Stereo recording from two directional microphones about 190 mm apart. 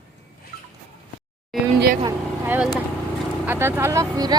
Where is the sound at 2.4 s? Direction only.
5° right (ahead or behind).